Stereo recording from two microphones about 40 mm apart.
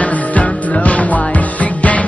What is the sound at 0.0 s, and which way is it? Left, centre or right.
Music, left.